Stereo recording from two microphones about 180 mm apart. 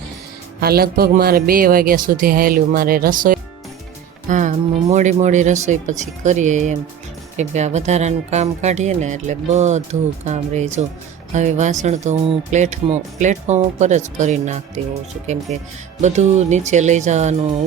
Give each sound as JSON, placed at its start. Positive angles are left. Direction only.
{"t": 0.6, "sound": "speech", "side_deg": -60}
{"t": 16.0, "sound": "speech", "side_deg": -40}